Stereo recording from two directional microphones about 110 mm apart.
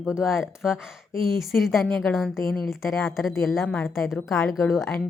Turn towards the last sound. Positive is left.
turn(degrees=0)  # may be behind; listen again after turning